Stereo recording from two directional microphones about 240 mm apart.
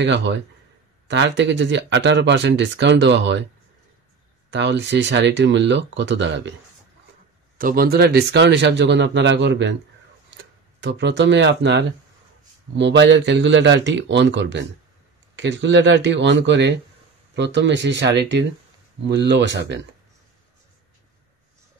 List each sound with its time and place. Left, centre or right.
0.1 s speech: right
4.5 s speech: right
7.5 s speech: right